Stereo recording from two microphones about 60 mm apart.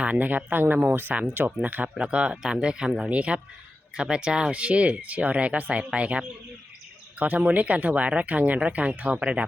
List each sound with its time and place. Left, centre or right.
0.0 s speech: right
2.0 s speech: centre